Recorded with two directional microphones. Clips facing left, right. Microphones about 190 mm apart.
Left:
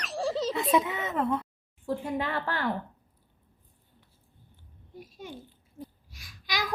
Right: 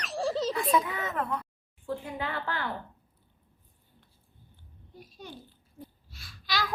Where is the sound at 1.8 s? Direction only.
40° left (ahead or behind).